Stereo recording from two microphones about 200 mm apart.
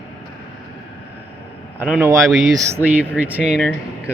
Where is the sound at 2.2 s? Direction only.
Centre (ahead or behind).